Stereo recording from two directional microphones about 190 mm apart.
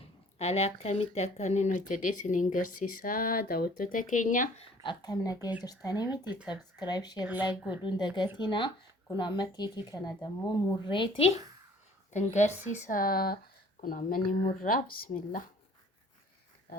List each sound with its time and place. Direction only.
0.3 s speech: 35° left (ahead or behind)
4.8 s speech: 25° left (ahead or behind)
6.2 s a woman's voice: 5° right (ahead or behind)
6.5 s speech: 20° left (ahead or behind)
7.3 s a woman's voice: 10° right (ahead or behind)
7.9 s speech: 25° left (ahead or behind)
11.3 s speech: 20° right (ahead or behind)
12.1 s speech: 40° left (ahead or behind)